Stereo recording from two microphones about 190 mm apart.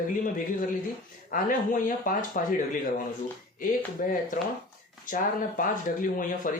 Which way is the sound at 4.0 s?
40° left (ahead or behind).